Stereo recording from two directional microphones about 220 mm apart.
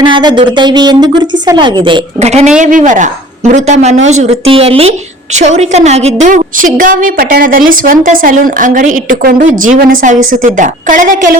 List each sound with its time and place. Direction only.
0.0 s a woman's voice: 20° right (ahead or behind); by 11.3 s 35° right (ahead or behind)